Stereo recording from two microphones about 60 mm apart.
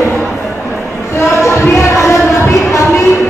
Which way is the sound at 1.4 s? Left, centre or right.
Left.